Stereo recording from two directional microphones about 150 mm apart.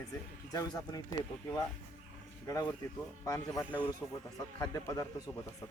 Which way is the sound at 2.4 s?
25° left (ahead or behind).